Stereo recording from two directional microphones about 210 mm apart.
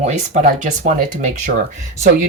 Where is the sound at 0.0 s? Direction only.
35° right (ahead or behind).